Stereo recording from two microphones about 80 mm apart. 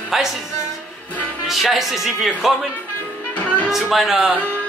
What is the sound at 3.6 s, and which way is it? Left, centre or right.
Speech, centre.